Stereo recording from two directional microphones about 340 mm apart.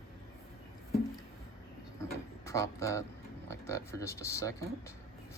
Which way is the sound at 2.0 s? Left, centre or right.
Centre.